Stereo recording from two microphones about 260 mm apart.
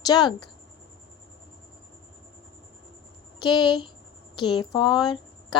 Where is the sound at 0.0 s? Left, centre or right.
Centre.